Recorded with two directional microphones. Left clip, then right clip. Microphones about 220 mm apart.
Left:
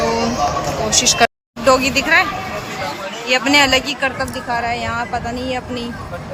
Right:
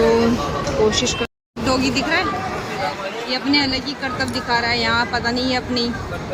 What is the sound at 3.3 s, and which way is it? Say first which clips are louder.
Speech: left 7 dB; 5° left (ahead or behind).